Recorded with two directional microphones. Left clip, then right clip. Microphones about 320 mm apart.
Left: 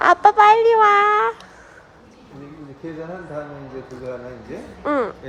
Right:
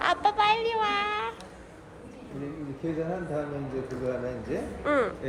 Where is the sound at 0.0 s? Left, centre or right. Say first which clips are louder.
Left 12 dB; left.